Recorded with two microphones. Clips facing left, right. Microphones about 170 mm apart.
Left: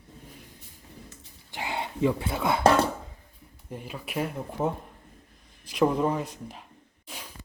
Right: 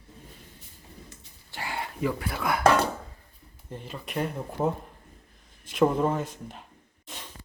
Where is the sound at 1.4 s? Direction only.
20° left (ahead or behind).